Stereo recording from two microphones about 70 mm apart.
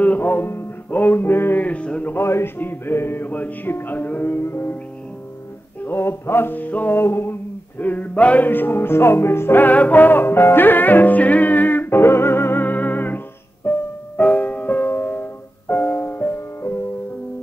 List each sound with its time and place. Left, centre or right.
0.0 s music: left
2.1 s music: left
5.9 s music: left
7.8 s music: left